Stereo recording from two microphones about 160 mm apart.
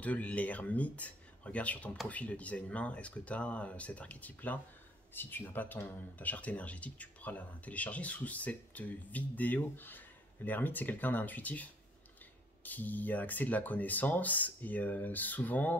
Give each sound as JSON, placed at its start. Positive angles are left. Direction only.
{"t": 0.0, "sound": "speech", "side_deg": 10}